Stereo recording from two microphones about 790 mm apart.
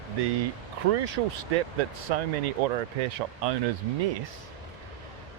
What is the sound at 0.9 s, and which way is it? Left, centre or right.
Speech, right.